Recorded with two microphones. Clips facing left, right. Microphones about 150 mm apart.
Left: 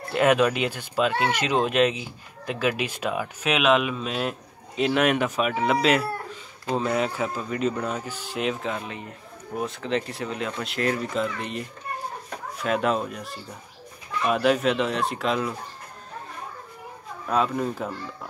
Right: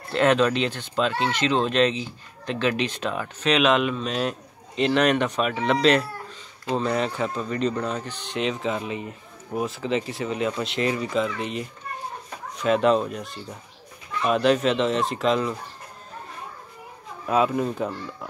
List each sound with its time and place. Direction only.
0.1 s speech: 10° left (ahead or behind)
17.3 s speech: 5° right (ahead or behind)